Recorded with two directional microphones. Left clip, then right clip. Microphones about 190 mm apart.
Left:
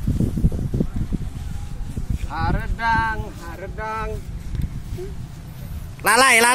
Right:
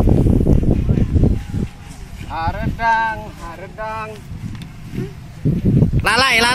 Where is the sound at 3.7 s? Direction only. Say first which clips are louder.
Right 2 dB; 25° right (ahead or behind).